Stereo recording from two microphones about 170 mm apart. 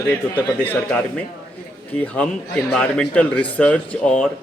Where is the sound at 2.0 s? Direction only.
5° left (ahead or behind).